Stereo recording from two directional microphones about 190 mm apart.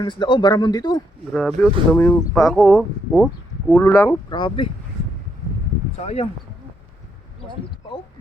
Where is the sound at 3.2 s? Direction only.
Centre (ahead or behind).